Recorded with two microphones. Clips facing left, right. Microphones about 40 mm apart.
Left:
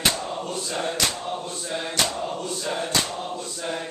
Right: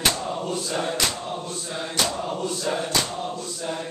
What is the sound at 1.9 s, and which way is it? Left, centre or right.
Chant, centre.